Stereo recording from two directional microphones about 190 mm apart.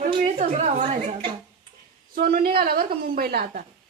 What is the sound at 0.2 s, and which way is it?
Speech, 35° right (ahead or behind).